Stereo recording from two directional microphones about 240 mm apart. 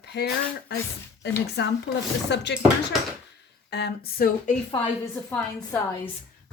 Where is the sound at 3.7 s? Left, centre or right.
Left.